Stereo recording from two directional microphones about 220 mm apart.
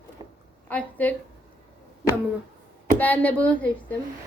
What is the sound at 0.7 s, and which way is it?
Speech, 5° left (ahead or behind).